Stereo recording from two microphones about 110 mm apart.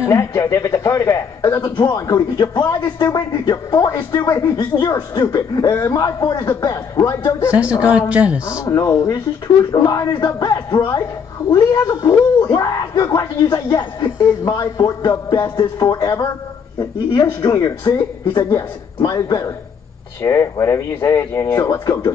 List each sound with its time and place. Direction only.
0.0 s speech: 25° left (ahead or behind)
5.7 s speech: 25° left (ahead or behind)
8.1 s a man's voice: 10° right (ahead or behind)
8.5 s speech: 30° left (ahead or behind)